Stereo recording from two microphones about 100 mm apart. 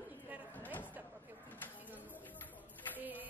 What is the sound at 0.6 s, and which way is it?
Speech, 20° left (ahead or behind).